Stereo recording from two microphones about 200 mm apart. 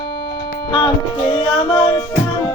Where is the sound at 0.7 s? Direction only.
25° left (ahead or behind).